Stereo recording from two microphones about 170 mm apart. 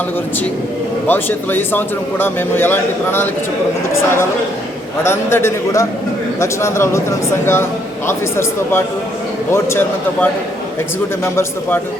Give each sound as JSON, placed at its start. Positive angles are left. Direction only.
{"t": 1.0, "sound": "a man's voice", "side_deg": 10}